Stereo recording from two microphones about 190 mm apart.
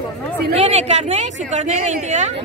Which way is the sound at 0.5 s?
35° right (ahead or behind).